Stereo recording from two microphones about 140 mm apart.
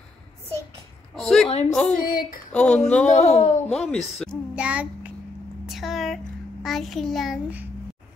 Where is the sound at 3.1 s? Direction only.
50° left (ahead or behind).